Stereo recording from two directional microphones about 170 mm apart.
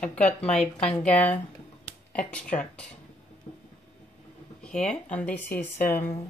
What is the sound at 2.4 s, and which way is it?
Speech, 50° left (ahead or behind).